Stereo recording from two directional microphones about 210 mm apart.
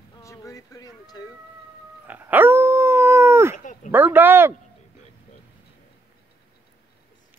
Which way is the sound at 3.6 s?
35° left (ahead or behind).